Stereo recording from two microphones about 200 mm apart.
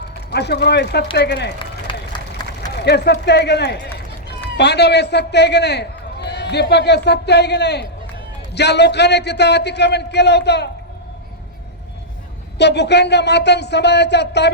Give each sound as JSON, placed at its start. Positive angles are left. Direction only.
{"t": 0.3, "sound": "a man's voice", "side_deg": 55}
{"t": 1.9, "sound": "run", "side_deg": 25}
{"t": 2.8, "sound": "a man's voice", "side_deg": 55}
{"t": 12.5, "sound": "a man's voice", "side_deg": 55}